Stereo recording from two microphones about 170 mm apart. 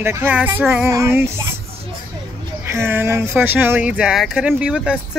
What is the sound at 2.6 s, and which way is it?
Speech, 15° right (ahead or behind).